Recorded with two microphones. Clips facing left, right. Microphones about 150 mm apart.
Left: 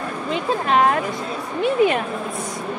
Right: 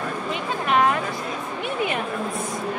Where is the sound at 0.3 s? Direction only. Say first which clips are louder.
Left 4 dB; 35° left (ahead or behind).